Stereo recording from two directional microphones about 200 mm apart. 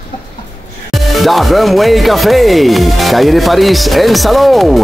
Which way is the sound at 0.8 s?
Centre (ahead or behind).